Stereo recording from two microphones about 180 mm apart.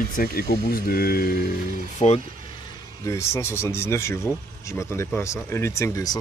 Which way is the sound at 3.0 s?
15° left (ahead or behind).